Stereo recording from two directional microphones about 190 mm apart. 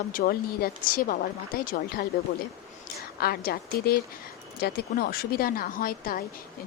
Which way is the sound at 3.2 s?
55° left (ahead or behind).